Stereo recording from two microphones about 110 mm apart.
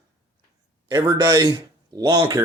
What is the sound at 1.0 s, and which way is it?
Speech, 35° right (ahead or behind).